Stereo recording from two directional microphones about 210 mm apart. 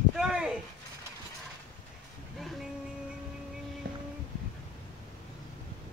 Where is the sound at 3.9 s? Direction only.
50° right (ahead or behind).